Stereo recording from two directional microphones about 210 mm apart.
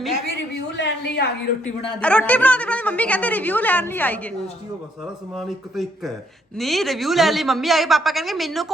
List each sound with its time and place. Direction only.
0.8 s a sound: 55° left (ahead or behind)
2.0 s a woman's voice: 5° left (ahead or behind)
5.4 s a woman's voice: centre (ahead or behind)